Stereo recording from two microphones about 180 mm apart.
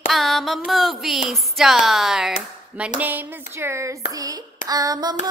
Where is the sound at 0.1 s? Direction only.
Centre (ahead or behind).